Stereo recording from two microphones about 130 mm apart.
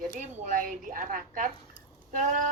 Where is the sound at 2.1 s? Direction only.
75° right (ahead or behind).